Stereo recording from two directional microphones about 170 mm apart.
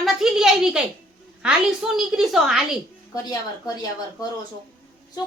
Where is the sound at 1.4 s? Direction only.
5° right (ahead or behind).